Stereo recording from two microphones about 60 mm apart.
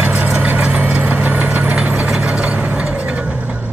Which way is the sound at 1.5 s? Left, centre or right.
Centre.